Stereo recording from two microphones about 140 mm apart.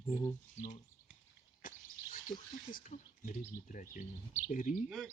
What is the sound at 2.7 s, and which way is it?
Speech, 60° left (ahead or behind).